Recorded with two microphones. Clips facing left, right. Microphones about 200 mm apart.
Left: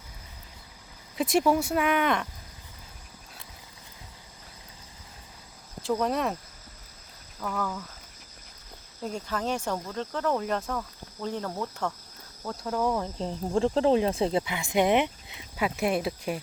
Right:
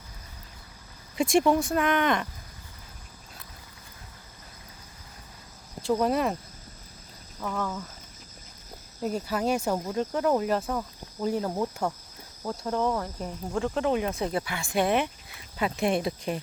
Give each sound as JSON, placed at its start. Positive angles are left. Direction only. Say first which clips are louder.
{"t": 1.1, "sound": "speech", "louder": "right 1 dB", "side_deg": 0}
{"t": 5.9, "sound": "speech", "louder": "right 2 dB", "side_deg": -5}
{"t": 7.3, "sound": "speech", "louder": "right 1 dB", "side_deg": -5}
{"t": 9.0, "sound": "speech", "louder": "right 4 dB", "side_deg": -5}
{"t": 12.5, "sound": "speech", "louder": "right 2 dB", "side_deg": -5}
{"t": 13.0, "sound": "speech", "louder": "left 2 dB", "side_deg": 25}
{"t": 15.5, "sound": "speech", "louder": "right 1 dB", "side_deg": 5}